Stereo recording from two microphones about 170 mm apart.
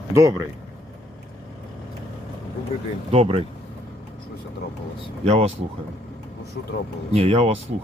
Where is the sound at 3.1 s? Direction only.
35° right (ahead or behind).